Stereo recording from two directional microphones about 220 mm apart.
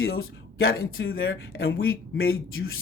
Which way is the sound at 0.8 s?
70° left (ahead or behind).